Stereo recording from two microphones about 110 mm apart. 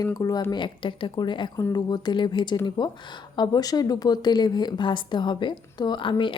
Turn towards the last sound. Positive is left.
turn(degrees=45)  # may be behind; listen again after turning